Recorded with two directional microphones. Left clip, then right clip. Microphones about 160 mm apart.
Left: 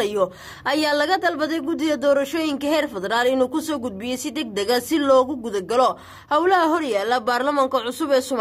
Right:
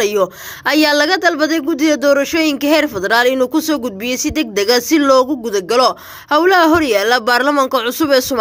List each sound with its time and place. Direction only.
0.0 s a woman's voice: 20° right (ahead or behind)